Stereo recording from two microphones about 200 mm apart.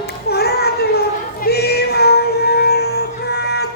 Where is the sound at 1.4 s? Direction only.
50° left (ahead or behind).